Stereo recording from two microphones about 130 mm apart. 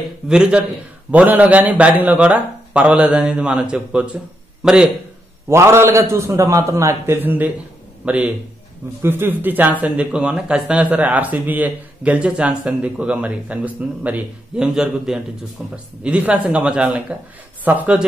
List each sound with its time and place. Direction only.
0.3 s speech: 5° right (ahead or behind)
5.5 s a man's voice: 20° right (ahead or behind)